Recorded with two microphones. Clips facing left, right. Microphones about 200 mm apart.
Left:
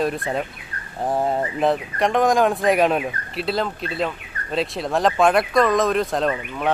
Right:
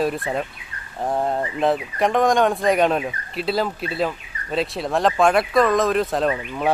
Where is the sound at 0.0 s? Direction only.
Centre (ahead or behind).